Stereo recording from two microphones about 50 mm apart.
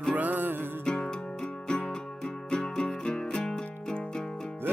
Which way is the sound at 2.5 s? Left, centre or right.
Centre.